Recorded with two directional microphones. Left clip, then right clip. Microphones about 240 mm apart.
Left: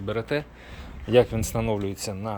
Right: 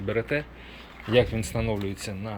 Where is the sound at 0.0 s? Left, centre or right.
Centre.